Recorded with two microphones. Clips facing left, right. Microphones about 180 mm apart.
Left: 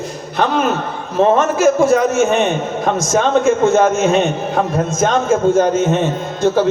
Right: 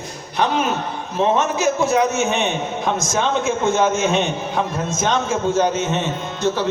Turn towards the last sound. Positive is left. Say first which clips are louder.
# left 6 dB
turn(degrees=45)  # may be behind; listen again after turning